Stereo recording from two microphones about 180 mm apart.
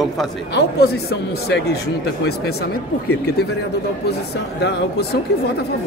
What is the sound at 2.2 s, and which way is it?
Speech, 60° left (ahead or behind).